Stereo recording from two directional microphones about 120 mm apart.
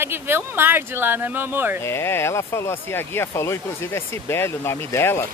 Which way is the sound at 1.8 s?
20° left (ahead or behind).